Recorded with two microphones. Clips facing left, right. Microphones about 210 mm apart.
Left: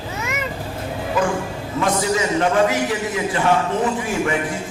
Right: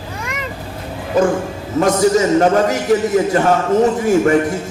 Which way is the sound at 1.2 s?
40° right (ahead or behind).